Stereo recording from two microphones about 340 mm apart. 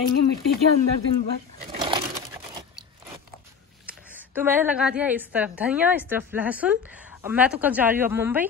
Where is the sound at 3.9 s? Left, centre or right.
Centre.